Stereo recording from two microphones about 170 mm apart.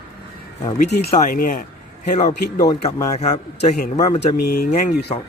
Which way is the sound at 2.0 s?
45° left (ahead or behind).